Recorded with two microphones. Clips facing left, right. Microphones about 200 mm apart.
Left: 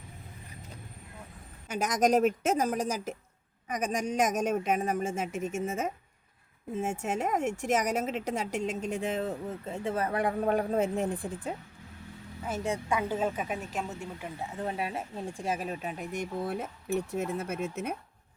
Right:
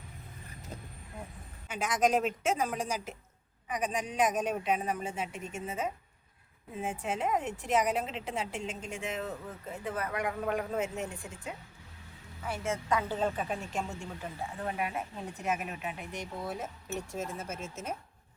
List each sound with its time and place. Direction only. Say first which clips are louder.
1.6 s a woman's voice: left 2 dB; 40° left (ahead or behind)
12.6 s speech: left 1 dB; 15° left (ahead or behind)
14.6 s speech: left 1 dB; 30° left (ahead or behind); by 17.9 s 60° left (ahead or behind)